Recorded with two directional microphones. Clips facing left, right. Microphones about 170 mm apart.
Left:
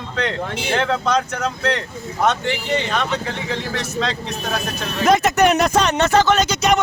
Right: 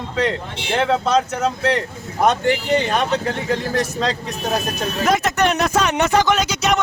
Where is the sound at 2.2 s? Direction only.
45° right (ahead or behind).